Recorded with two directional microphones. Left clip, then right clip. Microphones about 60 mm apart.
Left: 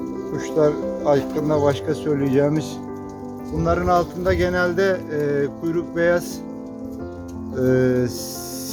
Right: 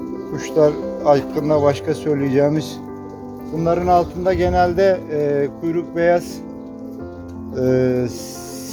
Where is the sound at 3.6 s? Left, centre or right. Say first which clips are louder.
Right 3 dB; left.